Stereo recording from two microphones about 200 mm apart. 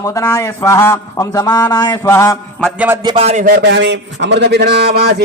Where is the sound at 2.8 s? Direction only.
15° right (ahead or behind); by 5.2 s 50° right (ahead or behind).